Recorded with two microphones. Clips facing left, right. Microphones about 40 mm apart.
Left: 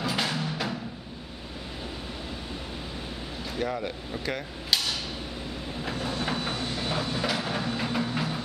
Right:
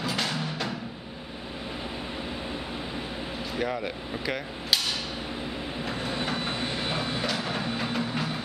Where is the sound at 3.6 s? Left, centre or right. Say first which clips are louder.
Even; centre.